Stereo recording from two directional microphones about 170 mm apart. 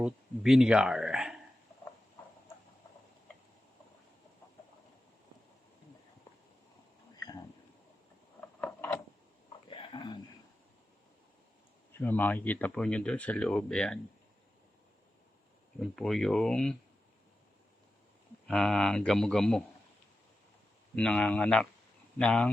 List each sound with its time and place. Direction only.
0.0 s speech: 5° right (ahead or behind)
8.6 s a sound: 10° left (ahead or behind)
9.6 s a sound: 30° left (ahead or behind)
11.9 s speech: 10° left (ahead or behind)
15.8 s speech: centre (ahead or behind)
18.4 s speech: centre (ahead or behind)
20.9 s speech: 5° left (ahead or behind)